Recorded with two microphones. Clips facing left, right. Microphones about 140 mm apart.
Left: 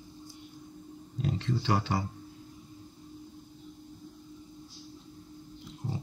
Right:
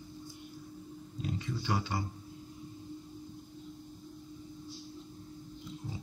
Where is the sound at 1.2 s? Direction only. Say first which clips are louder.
Left 6 dB; 70° left (ahead or behind); by 2.0 s 90° left.